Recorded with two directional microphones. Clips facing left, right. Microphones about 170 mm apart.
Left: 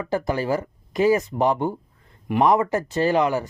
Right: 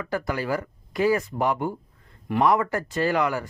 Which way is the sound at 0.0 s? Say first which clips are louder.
Left 4 dB; 25° left (ahead or behind).